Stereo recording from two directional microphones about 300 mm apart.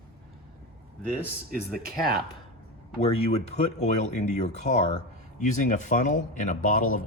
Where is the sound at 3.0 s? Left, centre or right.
Left.